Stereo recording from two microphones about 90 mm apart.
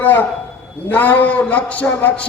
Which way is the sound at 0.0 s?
20° left (ahead or behind).